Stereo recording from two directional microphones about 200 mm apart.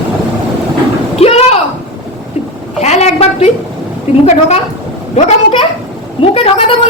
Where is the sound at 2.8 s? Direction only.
35° left (ahead or behind).